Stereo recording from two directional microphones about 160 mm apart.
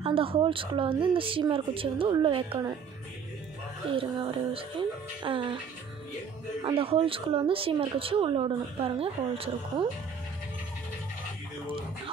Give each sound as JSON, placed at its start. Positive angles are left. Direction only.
{"t": 0.0, "sound": "speech", "side_deg": -35}
{"t": 3.9, "sound": "speech", "side_deg": -35}
{"t": 6.6, "sound": "speech", "side_deg": -35}